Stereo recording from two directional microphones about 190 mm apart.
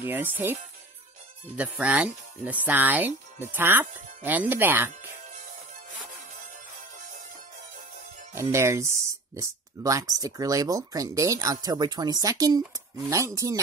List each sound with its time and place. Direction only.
0.0 s speech: 10° right (ahead or behind)
1.6 s speech: 5° right (ahead or behind)
8.4 s speech: 15° right (ahead or behind)